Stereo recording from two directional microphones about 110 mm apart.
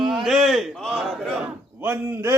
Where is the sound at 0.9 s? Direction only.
Centre (ahead or behind).